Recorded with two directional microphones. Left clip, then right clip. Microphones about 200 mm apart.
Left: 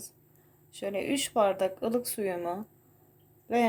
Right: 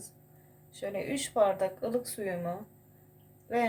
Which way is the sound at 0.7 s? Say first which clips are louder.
Left 3 dB; 40° left (ahead or behind).